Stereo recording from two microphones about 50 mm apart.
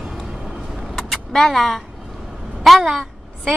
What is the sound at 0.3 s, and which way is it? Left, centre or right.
Vehicle, centre.